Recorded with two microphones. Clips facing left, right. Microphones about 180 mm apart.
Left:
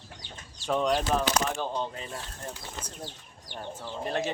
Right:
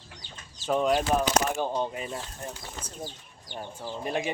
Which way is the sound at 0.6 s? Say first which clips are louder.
Right 2 dB; 5° right (ahead or behind).